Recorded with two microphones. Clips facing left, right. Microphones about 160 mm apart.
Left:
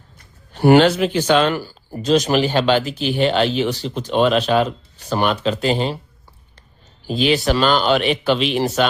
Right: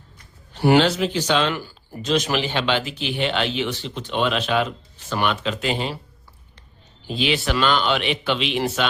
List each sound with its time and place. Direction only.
0.5 s a man's voice: 50° left (ahead or behind)
1.6 s speech: 35° left (ahead or behind)
7.1 s speech: 40° left (ahead or behind)